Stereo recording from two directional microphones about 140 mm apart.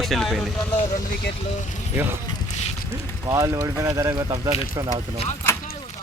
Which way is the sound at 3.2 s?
25° right (ahead or behind).